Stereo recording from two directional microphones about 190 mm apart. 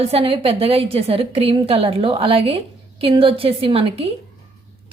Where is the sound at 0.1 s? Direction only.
30° right (ahead or behind).